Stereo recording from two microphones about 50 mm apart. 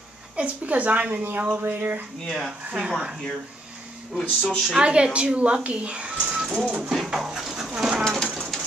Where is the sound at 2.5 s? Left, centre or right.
Right.